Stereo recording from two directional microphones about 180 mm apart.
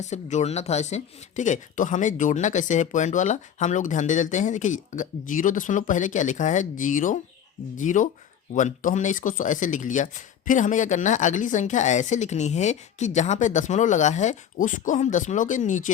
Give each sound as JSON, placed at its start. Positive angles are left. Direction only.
{"t": 0.0, "sound": "speech", "side_deg": 40}